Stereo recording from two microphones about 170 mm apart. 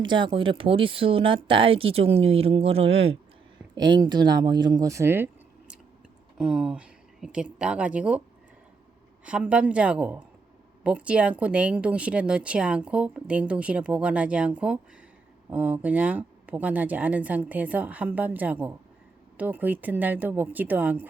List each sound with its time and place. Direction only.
0.0 s speech: 30° right (ahead or behind); by 5.7 s 15° right (ahead or behind)
6.3 s a sound: 5° right (ahead or behind)
7.6 s speech: 5° right (ahead or behind)
9.2 s speech: 10° right (ahead or behind)